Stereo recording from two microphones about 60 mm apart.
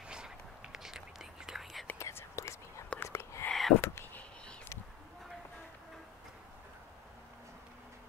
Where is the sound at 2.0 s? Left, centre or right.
Left.